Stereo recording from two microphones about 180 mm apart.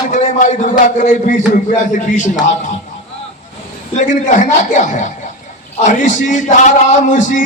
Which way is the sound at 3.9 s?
45° left (ahead or behind).